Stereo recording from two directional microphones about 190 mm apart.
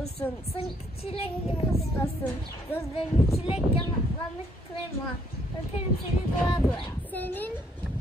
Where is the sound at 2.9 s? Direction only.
30° left (ahead or behind).